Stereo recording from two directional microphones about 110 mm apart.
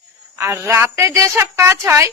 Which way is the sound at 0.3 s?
25° right (ahead or behind).